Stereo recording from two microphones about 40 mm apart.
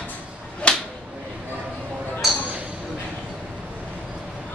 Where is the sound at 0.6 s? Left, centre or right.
Left.